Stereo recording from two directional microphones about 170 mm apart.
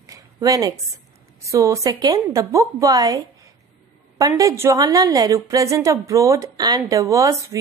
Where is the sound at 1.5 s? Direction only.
20° right (ahead or behind).